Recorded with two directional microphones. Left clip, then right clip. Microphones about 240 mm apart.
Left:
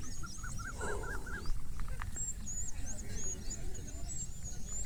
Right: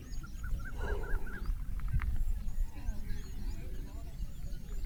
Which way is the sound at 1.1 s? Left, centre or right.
Left.